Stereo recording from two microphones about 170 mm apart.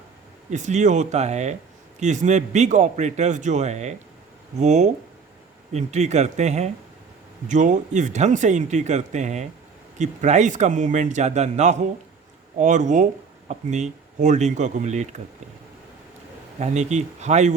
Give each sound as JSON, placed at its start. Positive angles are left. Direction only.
{"t": 0.5, "sound": "speech", "side_deg": -45}
{"t": 16.6, "sound": "speech", "side_deg": -45}